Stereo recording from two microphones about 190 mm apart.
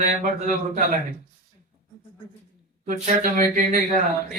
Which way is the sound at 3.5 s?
45° right (ahead or behind).